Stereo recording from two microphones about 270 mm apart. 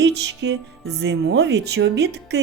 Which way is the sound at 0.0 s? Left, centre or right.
Right.